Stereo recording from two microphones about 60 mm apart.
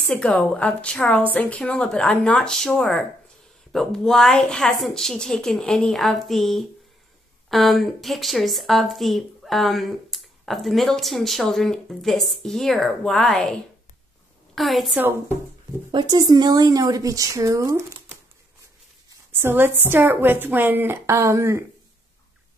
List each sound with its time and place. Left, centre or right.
0.1 s a woman's voice: centre
1.3 s speech: left
2.5 s a woman's voice: centre
15.0 s a woman's voice: right
16.4 s speech: right
19.3 s a woman's voice: right